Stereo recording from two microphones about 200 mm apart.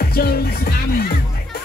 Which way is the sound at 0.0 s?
50° left (ahead or behind).